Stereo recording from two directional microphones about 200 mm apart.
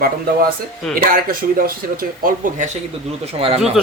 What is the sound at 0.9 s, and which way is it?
Speech, 45° right (ahead or behind).